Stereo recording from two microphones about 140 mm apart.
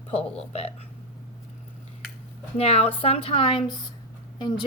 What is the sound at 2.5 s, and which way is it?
A woman's voice, 45° left (ahead or behind).